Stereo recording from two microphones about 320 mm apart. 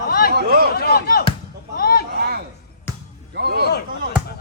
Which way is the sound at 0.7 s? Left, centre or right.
Left.